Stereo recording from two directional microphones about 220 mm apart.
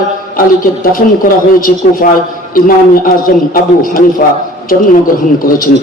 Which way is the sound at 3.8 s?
40° left (ahead or behind).